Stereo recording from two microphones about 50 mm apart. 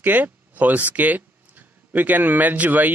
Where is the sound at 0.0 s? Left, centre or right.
Right.